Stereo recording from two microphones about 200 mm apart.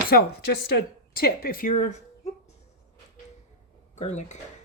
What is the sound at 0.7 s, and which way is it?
A woman's voice, 50° left (ahead or behind).